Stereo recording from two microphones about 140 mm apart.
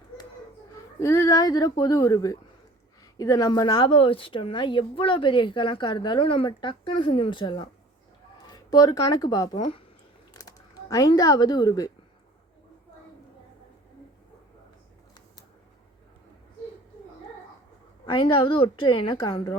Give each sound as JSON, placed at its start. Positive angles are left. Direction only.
{"t": 0.9, "sound": "a woman's voice", "side_deg": 20}
{"t": 18.0, "sound": "a woman's voice", "side_deg": 35}